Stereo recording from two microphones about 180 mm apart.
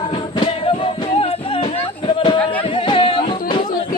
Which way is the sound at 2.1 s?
25° left (ahead or behind).